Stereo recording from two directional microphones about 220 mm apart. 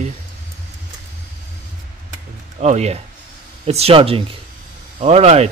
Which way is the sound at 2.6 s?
30° right (ahead or behind).